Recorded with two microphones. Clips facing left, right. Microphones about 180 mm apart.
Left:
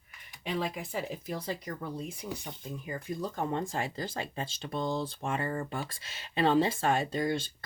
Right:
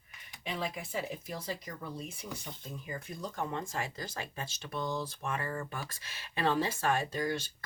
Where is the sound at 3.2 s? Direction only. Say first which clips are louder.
Left 4 dB; 35° left (ahead or behind).